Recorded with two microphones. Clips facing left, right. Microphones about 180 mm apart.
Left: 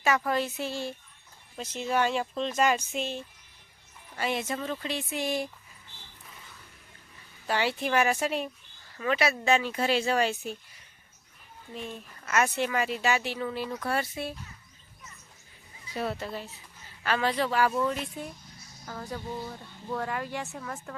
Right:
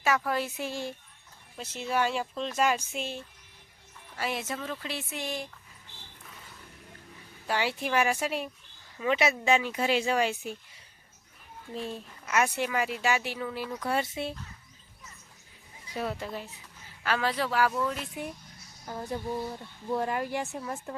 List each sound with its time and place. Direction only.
0.3 s speech: 10° right (ahead or behind)
7.4 s speech: 10° right (ahead or behind)
9.0 s speech: 20° right (ahead or behind)
11.7 s a child's voice: 30° right (ahead or behind)
12.2 s speech: 10° right (ahead or behind)
13.8 s speech: 20° right (ahead or behind)
16.0 s speech: 10° right (ahead or behind)
18.9 s speech: 20° right (ahead or behind)